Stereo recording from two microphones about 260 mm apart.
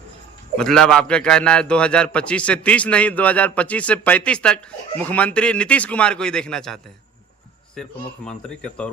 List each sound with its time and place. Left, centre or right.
0.5 s a man's voice: centre
7.8 s a man's voice: centre